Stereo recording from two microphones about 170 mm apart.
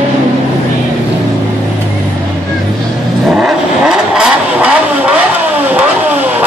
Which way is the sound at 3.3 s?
5° right (ahead or behind).